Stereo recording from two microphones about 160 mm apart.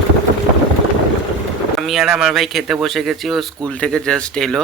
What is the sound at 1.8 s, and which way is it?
Speech, 5° right (ahead or behind).